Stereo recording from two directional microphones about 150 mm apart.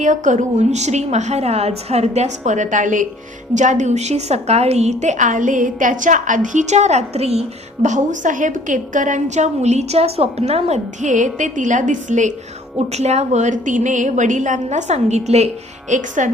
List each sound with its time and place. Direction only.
0.0 s a woman's voice: 55° right (ahead or behind)
15.9 s a woman's voice: 55° right (ahead or behind)